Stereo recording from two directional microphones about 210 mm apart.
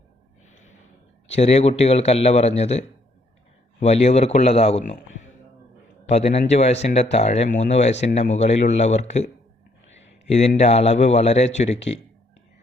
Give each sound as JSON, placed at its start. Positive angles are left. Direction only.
{"t": 1.3, "sound": "speech", "side_deg": 30}